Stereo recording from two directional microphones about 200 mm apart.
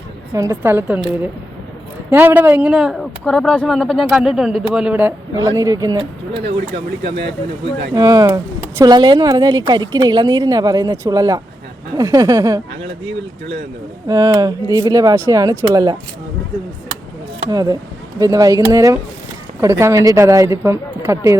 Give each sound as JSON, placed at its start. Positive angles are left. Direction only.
{"t": 0.3, "sound": "speech", "side_deg": -15}
{"t": 7.9, "sound": "a woman's voice", "side_deg": -20}
{"t": 14.1, "sound": "speech", "side_deg": -15}
{"t": 17.5, "sound": "a woman's voice", "side_deg": -20}